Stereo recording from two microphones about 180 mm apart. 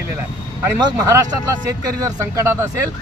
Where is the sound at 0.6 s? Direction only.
20° right (ahead or behind).